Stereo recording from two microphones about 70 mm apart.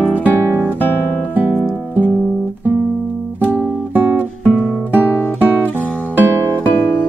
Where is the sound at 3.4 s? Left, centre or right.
Left.